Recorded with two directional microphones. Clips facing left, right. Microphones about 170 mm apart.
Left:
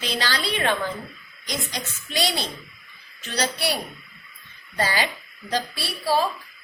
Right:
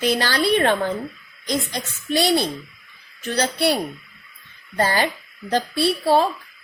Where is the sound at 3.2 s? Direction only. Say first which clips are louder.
Right 6 dB; 55° right (ahead or behind).